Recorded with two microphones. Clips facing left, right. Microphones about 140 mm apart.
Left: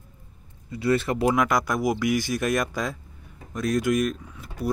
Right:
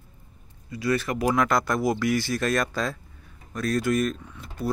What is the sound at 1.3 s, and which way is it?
Speech, 15° left (ahead or behind).